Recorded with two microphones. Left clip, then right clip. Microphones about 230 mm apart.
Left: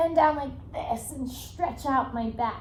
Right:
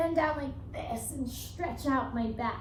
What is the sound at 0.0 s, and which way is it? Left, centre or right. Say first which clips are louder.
A child's voice: left 7 dB; centre.